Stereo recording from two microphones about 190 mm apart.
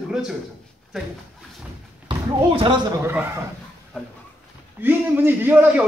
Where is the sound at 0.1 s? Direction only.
5° right (ahead or behind).